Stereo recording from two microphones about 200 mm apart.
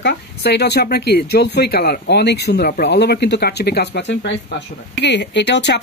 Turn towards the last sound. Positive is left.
turn(degrees=60)  # may be behind; listen again after turning